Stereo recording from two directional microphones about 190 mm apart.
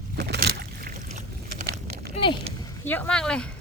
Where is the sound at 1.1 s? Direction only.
40° right (ahead or behind).